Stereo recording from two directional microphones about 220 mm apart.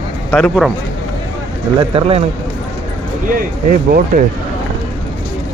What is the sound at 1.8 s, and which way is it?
Speech, 25° right (ahead or behind).